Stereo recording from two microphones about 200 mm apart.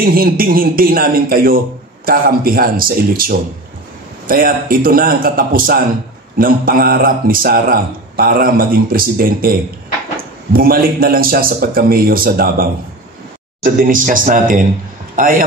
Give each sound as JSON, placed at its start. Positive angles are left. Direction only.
{"t": 0.0, "sound": "a man's voice", "side_deg": -45}